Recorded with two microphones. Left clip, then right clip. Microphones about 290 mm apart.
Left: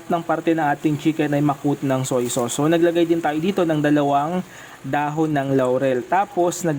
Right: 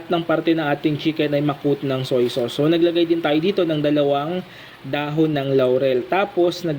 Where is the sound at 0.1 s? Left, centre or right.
Centre.